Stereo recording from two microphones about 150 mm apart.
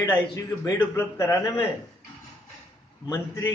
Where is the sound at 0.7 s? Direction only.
20° left (ahead or behind).